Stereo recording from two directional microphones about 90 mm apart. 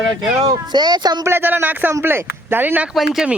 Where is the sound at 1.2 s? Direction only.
25° right (ahead or behind).